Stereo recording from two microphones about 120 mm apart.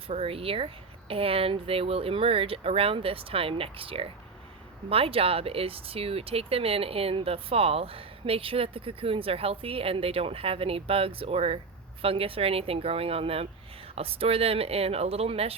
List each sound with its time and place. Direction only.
0.1 s speech: 55° right (ahead or behind)